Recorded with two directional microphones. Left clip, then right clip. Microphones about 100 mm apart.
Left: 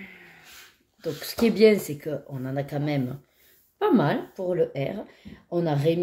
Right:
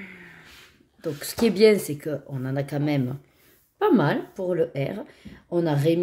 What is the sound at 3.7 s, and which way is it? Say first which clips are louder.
Speech: right 2 dB; 30° right (ahead or behind).